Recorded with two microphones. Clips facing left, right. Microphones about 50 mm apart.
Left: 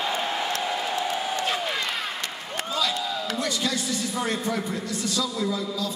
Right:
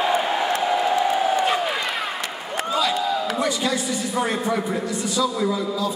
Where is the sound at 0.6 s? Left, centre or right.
Centre.